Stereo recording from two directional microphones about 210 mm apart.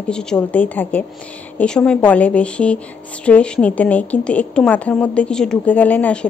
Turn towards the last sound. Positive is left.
turn(degrees=5)  # may be behind; listen again after turning